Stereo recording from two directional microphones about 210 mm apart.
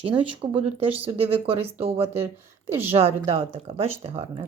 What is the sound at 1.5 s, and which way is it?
Speech, 30° right (ahead or behind).